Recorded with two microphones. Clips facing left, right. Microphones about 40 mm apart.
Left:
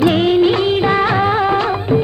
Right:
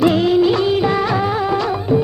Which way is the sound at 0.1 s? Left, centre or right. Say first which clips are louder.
Left 1 dB; left.